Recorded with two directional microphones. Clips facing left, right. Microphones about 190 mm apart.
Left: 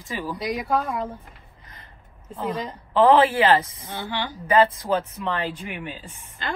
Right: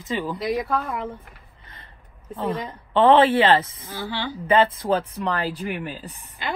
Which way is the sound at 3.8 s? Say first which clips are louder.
Even; 25° left (ahead or behind).